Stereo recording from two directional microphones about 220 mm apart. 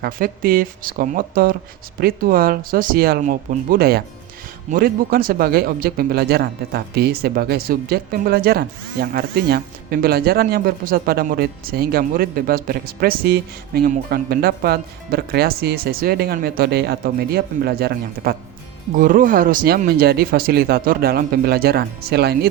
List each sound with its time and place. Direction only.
0.0 s speech: 40° right (ahead or behind)